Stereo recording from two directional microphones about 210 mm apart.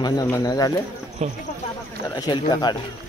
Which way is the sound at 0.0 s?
15° left (ahead or behind).